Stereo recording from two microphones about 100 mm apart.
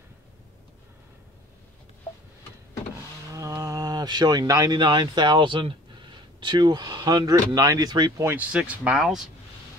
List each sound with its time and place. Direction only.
3.3 s a sound: 35° right (ahead or behind)
4.7 s speech: 50° right (ahead or behind)
8.2 s speech: 20° right (ahead or behind); by 9.3 s 5° right (ahead or behind)